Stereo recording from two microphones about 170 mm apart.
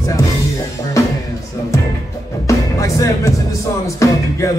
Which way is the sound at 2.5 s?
20° left (ahead or behind).